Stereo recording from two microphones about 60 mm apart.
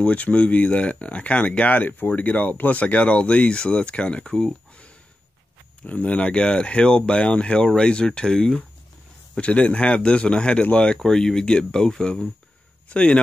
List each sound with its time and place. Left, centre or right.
0.0 s speech: left
11.0 s speech: centre